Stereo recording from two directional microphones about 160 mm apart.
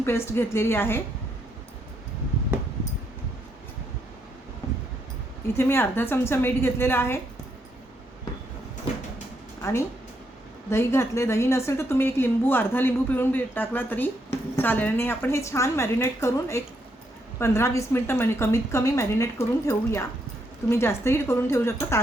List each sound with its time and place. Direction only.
0.0 s a woman's voice: 15° left (ahead or behind)
5.5 s a woman's voice: 15° left (ahead or behind)
9.6 s a sound: 15° left (ahead or behind)
10.7 s a woman's voice: 15° left (ahead or behind)